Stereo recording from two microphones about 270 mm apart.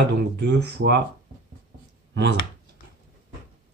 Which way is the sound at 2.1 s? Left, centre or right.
Right.